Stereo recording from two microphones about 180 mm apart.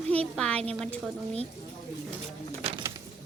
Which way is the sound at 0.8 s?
Centre (ahead or behind).